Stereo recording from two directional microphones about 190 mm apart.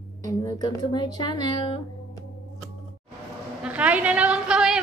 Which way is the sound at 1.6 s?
25° left (ahead or behind).